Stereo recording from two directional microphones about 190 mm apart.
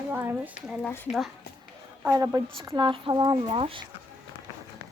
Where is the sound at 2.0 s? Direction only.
20° right (ahead or behind).